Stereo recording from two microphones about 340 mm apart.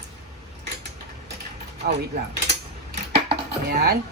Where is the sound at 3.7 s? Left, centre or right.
Right.